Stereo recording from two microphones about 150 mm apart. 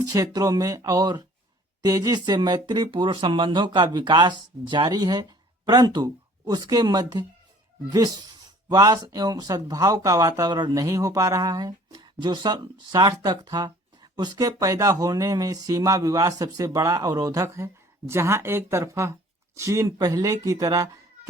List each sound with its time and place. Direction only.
0.0 s speech: 25° right (ahead or behind)